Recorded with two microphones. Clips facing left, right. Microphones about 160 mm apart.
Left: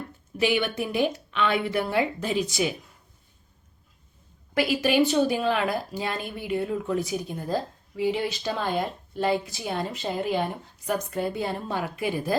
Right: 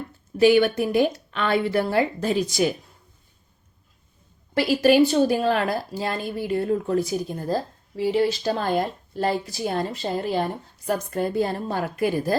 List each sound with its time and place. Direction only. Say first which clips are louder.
0.3 s a woman's voice: right 8 dB; 40° right (ahead or behind)
4.5 s a woman's voice: right 5 dB; 40° right (ahead or behind)